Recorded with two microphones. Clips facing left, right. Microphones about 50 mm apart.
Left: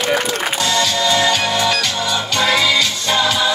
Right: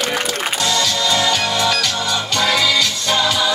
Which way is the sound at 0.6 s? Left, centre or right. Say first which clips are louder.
Left 2 dB; left.